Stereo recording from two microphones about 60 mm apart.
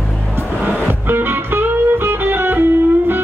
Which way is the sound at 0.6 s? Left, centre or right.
Right.